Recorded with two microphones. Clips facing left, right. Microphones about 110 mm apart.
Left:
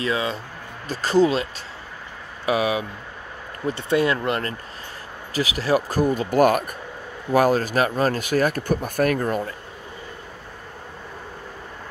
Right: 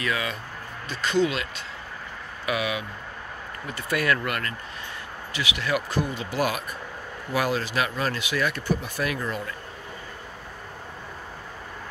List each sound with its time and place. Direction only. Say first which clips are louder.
0.0 s speech: left 4 dB; 30° left (ahead or behind); by 9.5 s 45° left (ahead or behind)